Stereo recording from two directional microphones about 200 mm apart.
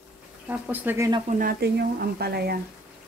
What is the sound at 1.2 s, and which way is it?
Speech, 45° right (ahead or behind).